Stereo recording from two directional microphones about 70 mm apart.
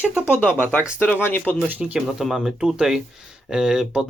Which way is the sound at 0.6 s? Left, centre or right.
Left.